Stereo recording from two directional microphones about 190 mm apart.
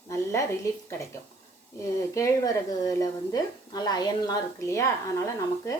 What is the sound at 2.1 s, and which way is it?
A woman's voice, 15° left (ahead or behind).